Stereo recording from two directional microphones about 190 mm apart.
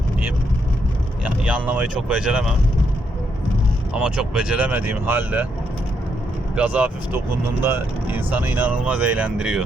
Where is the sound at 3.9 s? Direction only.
5° right (ahead or behind).